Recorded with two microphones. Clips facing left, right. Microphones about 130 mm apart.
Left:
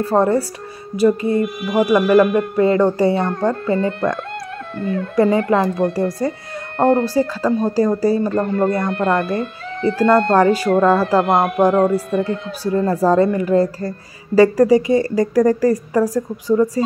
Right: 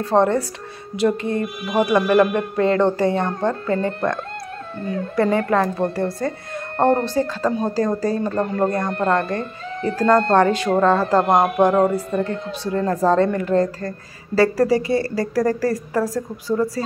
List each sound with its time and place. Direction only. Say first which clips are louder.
0.0 s a woman's voice: left 2 dB; 5° left (ahead or behind)
4.7 s speech: left 4 dB; 70° left (ahead or behind)
5.1 s a woman's voice: left 3 dB; 15° left (ahead or behind)
11.2 s speech: even; 15° right (ahead or behind)
11.9 s a woman's voice: left 3 dB; 10° left (ahead or behind)